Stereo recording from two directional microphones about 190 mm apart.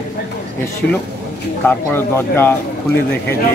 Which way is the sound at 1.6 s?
10° left (ahead or behind).